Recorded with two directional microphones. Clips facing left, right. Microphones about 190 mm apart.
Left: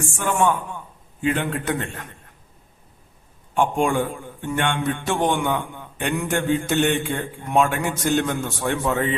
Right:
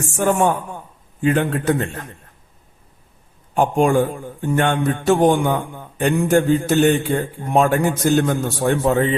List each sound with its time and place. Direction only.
0.2 s a man's voice: 40° right (ahead or behind)
3.5 s a man's voice: 40° right (ahead or behind)